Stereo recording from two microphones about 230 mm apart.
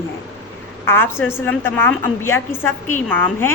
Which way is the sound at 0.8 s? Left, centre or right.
Centre.